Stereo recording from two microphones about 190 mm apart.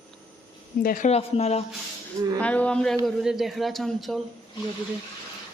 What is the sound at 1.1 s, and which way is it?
Speech, 35° left (ahead or behind).